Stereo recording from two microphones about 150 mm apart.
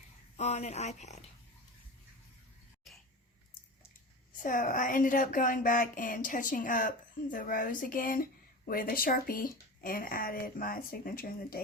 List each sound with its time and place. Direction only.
0.3 s speech: 45° left (ahead or behind)
4.4 s a woman's voice: 65° left (ahead or behind)